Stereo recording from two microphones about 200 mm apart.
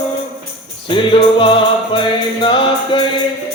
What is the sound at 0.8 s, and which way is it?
Music, 25° left (ahead or behind).